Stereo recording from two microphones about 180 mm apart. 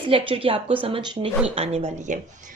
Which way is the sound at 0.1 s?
30° right (ahead or behind).